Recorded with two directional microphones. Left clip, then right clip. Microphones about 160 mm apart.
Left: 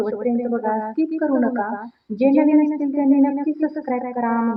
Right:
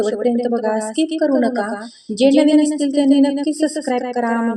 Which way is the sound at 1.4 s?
45° right (ahead or behind).